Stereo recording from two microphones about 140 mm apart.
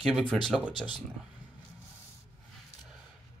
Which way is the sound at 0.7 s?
35° left (ahead or behind).